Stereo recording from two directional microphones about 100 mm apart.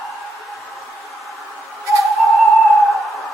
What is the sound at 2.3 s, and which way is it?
Music, centre (ahead or behind).